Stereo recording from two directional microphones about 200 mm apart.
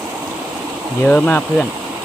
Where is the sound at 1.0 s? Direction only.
5° left (ahead or behind).